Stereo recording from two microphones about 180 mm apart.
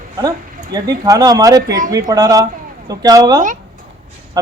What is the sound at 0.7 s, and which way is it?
Speech, 20° right (ahead or behind).